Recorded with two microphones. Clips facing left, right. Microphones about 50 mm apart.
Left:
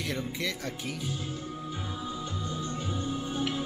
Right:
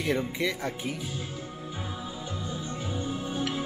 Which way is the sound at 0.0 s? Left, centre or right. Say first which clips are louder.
Right 5 dB; centre.